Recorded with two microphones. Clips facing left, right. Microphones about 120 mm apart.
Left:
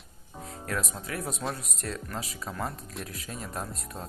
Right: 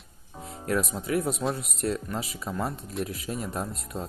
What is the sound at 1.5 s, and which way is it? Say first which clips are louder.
Speech: right 7 dB; 30° right (ahead or behind).